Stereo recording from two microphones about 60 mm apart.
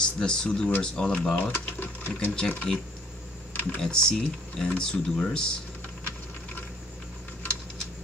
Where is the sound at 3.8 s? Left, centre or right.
Centre.